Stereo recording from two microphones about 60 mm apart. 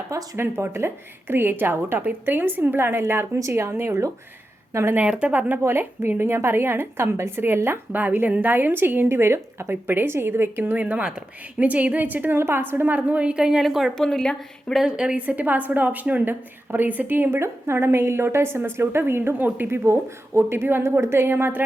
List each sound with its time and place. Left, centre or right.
0.3 s a woman's voice: right
5.0 s a woman's voice: centre
5.3 s a woman's voice: right
5.6 s a woman's voice: right
10.7 s a woman's voice: right
12.4 s a woman's voice: right
13.0 s a woman's voice: right
13.6 s speech: centre
13.9 s speech: centre
14.8 s a woman's voice: centre; by 21.6 s right